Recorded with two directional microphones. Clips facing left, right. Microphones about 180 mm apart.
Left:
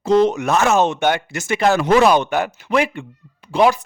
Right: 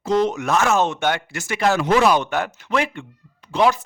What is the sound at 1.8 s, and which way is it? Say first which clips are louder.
Speech: left 3 dB; 50° left (ahead or behind).